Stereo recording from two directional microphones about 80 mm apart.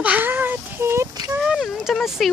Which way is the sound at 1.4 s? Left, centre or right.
Centre.